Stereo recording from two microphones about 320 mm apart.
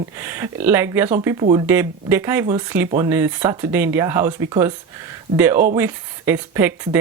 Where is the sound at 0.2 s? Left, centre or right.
Centre.